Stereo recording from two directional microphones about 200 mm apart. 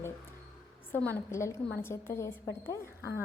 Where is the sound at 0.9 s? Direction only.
10° left (ahead or behind).